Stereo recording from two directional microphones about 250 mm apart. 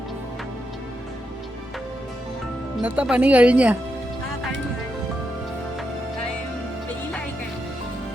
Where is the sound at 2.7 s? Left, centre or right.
Centre.